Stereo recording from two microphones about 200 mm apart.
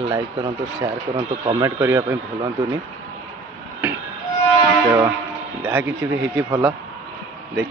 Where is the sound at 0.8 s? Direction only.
25° right (ahead or behind).